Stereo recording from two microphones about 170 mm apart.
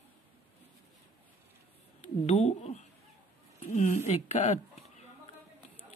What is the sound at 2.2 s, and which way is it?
Speech, 40° left (ahead or behind).